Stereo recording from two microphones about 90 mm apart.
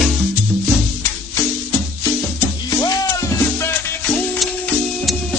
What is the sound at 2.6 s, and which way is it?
Music, 45° left (ahead or behind).